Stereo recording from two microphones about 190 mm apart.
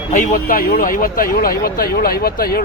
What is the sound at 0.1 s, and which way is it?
Speech, 45° left (ahead or behind).